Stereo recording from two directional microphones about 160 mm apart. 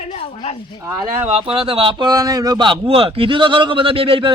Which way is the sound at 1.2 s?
35° right (ahead or behind).